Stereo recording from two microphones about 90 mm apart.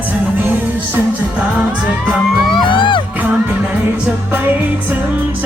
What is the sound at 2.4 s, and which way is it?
Music, 65° left (ahead or behind).